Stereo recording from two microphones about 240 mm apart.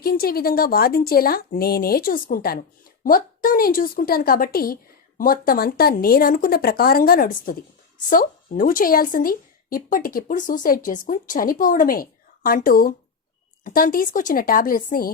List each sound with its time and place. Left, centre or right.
0.0 s speech: left